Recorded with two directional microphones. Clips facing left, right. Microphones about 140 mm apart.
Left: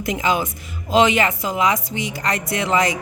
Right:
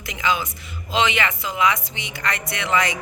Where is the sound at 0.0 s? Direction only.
45° left (ahead or behind).